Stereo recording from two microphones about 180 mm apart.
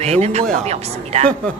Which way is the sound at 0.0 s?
35° right (ahead or behind).